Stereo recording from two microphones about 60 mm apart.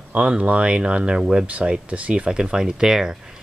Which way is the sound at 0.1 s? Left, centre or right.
Right.